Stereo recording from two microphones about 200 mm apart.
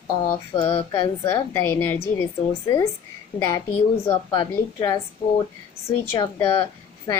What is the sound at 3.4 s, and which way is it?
A woman's voice, 15° left (ahead or behind).